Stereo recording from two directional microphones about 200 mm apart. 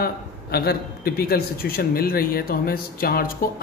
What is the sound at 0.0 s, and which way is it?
Speech, 50° left (ahead or behind).